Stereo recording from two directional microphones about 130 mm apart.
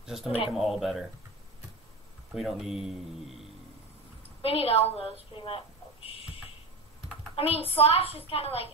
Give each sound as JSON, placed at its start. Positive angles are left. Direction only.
{"t": 0.0, "sound": "speech", "side_deg": -5}
{"t": 2.3, "sound": "speech", "side_deg": 0}
{"t": 4.4, "sound": "a woman's voice", "side_deg": 45}
{"t": 5.4, "sound": "a sound", "side_deg": 45}
{"t": 7.3, "sound": "a woman's voice", "side_deg": 45}